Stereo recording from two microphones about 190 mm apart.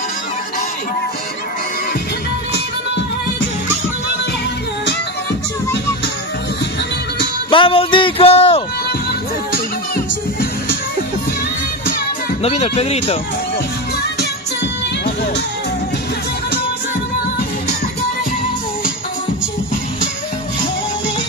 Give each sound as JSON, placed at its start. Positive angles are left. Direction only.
{"t": 7.5, "sound": "speech", "side_deg": 25}
{"t": 12.4, "sound": "speech", "side_deg": 35}
{"t": 14.6, "sound": "music", "side_deg": 65}